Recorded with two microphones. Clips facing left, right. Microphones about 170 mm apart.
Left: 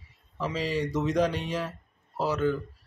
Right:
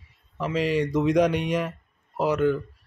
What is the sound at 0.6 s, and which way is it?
Speech, 10° right (ahead or behind).